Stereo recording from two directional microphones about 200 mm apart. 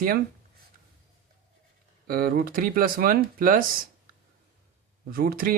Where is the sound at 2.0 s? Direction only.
45° right (ahead or behind).